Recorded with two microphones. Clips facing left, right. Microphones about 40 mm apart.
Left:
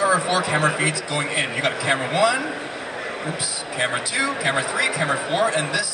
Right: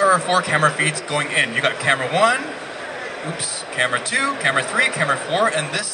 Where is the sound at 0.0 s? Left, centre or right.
Right.